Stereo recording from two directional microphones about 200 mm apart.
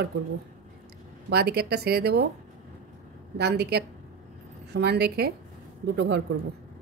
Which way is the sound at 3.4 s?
55° right (ahead or behind).